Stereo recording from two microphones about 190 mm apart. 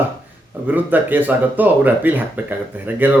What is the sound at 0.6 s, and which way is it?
Speech, 10° right (ahead or behind).